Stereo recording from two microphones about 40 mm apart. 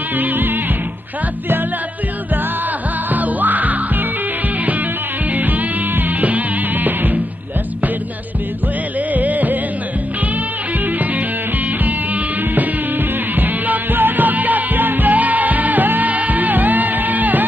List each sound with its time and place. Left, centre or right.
0.2 s music: right
3.1 s music: right
5.3 s music: right
9.1 s music: right
11.8 s music: right